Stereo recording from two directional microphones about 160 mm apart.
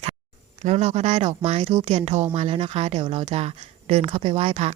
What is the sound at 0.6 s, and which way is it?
A woman's voice, 45° right (ahead or behind).